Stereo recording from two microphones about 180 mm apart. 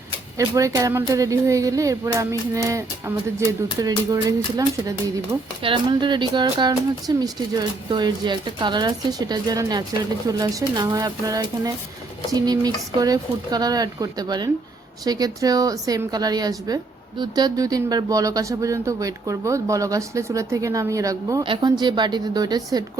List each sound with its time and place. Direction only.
0.3 s a woman's voice: 20° right (ahead or behind)